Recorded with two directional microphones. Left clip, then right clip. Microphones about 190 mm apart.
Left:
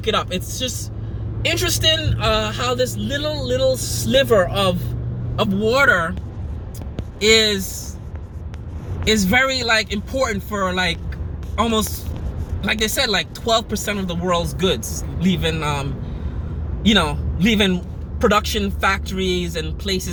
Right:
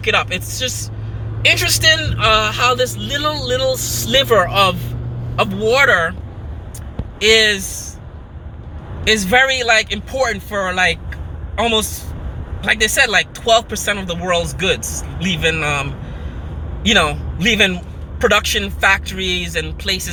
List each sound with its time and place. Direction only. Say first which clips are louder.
0.0 s a man's voice: right 4 dB; 10° left (ahead or behind)
7.2 s a man's voice: right 3 dB; 10° left (ahead or behind)
9.2 s a man's voice: right 5 dB; 10° left (ahead or behind)
12.6 s a man's voice: right 6 dB; 10° left (ahead or behind)
16.9 s a man's voice: right 4 dB; 5° left (ahead or behind)